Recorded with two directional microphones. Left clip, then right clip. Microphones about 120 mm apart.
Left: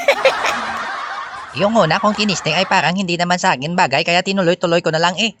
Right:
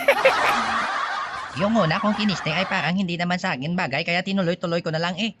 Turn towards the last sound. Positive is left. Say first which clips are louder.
# left 10 dB
turn(degrees=60)  # may be behind; listen again after turning